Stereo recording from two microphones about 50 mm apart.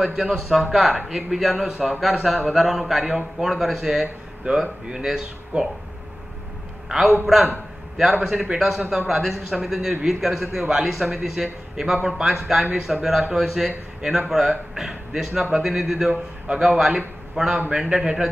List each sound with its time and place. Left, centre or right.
0.0 s a man's voice: centre
6.9 s a man's voice: centre
16.1 s a man's voice: right
17.6 s a man's voice: centre